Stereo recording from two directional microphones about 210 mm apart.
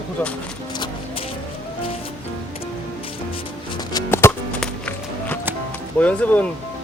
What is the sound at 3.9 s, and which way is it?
Music, 15° left (ahead or behind).